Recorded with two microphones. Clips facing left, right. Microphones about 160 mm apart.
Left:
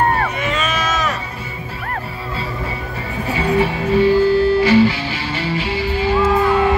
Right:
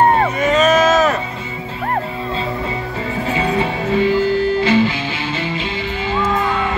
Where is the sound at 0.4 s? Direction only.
40° right (ahead or behind).